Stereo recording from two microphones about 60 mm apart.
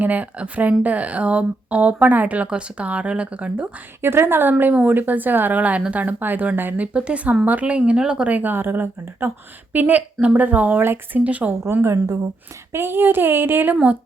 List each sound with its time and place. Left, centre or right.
0.0 s speech: right
4.0 s a woman's voice: right; by 8.4 s centre
8.4 s a woman's voice: right
10.8 s a woman's voice: right
11.2 s speech: right
11.7 s a woman's voice: right